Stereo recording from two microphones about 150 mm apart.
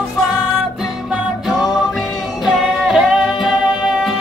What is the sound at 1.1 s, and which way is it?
Music, centre (ahead or behind).